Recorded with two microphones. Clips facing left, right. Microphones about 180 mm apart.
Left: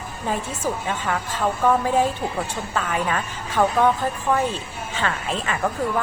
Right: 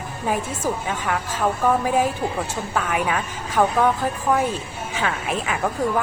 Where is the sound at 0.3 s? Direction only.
10° right (ahead or behind).